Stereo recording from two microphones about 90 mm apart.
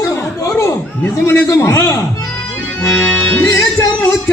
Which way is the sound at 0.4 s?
35° left (ahead or behind).